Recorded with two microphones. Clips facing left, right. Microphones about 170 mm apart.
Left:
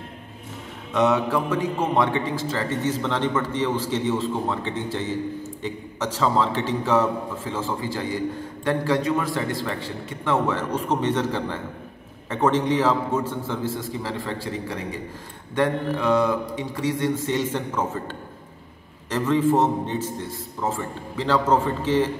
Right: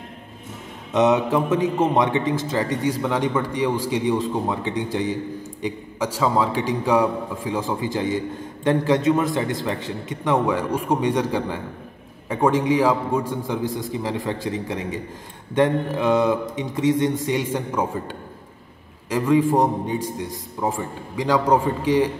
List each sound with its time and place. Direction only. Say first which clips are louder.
0.9 s a man's voice: right 3 dB; 20° right (ahead or behind)
15.5 s mantra: right 3 dB; 20° right (ahead or behind)
19.0 s a man's voice: right 2 dB; 10° right (ahead or behind)